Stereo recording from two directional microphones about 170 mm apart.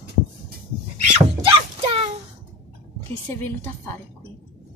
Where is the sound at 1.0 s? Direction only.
35° right (ahead or behind).